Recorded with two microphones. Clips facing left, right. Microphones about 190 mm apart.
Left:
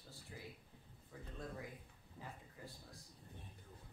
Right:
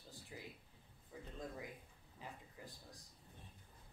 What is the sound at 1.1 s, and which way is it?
Speech, 15° right (ahead or behind).